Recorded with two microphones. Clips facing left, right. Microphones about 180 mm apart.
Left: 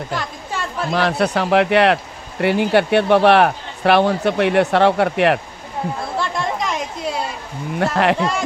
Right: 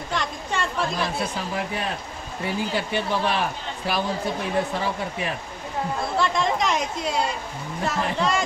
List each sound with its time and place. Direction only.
0.1 s chatter: 5° left (ahead or behind)
0.9 s speech: 70° left (ahead or behind)
6.1 s chatter: centre (ahead or behind)
7.8 s speech: 80° left